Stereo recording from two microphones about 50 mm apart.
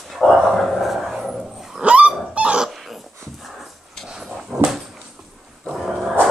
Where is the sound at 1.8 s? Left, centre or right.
Right.